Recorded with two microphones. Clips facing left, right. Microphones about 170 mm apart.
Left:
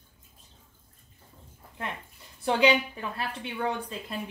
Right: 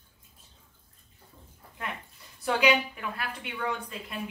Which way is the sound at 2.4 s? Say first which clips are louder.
Left 2 dB; 30° left (ahead or behind).